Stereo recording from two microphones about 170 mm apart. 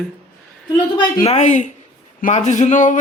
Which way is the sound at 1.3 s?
45° left (ahead or behind).